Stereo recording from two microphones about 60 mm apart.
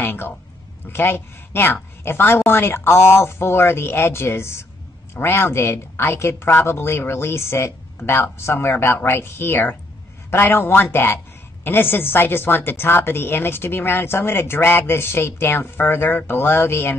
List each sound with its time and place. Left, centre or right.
0.0 s music: left
0.8 s a woman's voice: left